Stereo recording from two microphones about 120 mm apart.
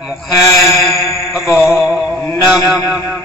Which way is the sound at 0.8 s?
5° right (ahead or behind).